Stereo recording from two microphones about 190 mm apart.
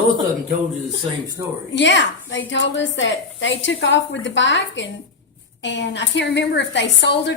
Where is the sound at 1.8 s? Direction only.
70° left (ahead or behind).